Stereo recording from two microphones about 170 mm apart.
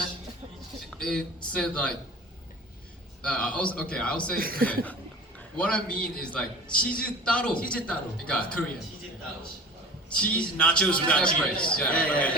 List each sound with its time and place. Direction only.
0.9 s speech: 5° left (ahead or behind)
3.2 s a man's voice: 5° left (ahead or behind)
4.4 s speech: 60° right (ahead or behind)
4.7 s a man's voice: 10° left (ahead or behind)
10.1 s a man's voice: 5° left (ahead or behind)